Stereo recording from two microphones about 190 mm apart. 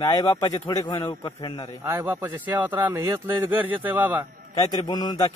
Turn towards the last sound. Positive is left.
turn(degrees=20)  # may be behind; listen again after turning